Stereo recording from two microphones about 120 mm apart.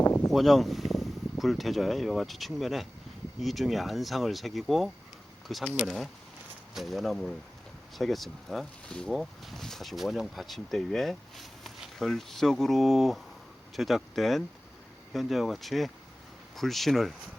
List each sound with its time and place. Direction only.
0.0 s a sound: 15° left (ahead or behind)
0.3 s speech: centre (ahead or behind)
6.7 s speech: centre (ahead or behind)